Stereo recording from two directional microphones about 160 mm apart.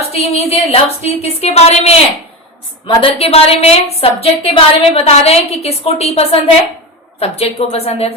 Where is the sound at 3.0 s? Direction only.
40° left (ahead or behind).